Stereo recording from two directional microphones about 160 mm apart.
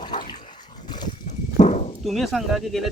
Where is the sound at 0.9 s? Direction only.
25° left (ahead or behind).